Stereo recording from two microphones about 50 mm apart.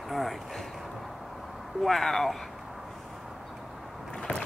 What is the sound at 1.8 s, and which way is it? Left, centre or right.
Speech, centre.